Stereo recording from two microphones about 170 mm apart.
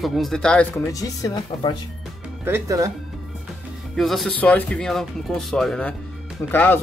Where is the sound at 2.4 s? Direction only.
15° right (ahead or behind).